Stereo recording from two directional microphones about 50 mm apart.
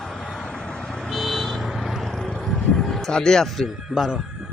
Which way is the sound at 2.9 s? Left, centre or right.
Centre.